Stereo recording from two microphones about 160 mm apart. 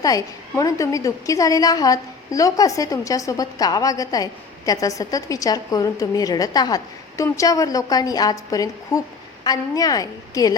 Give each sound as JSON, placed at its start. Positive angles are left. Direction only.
{"t": 0.0, "sound": "a woman's voice", "side_deg": 20}